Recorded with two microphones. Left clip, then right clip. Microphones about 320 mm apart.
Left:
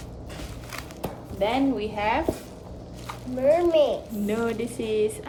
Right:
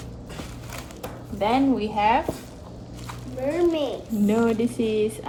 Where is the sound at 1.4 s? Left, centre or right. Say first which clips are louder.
Right 2 dB; right.